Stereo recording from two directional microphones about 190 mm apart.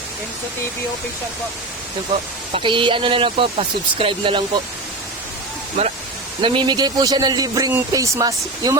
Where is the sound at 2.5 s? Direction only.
30° right (ahead or behind).